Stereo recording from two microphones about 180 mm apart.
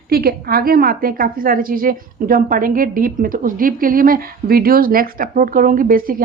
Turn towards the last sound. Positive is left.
turn(degrees=-50)  # may be behind; listen again after turning